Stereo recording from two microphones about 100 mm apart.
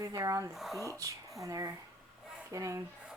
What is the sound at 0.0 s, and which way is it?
Speech, 30° right (ahead or behind).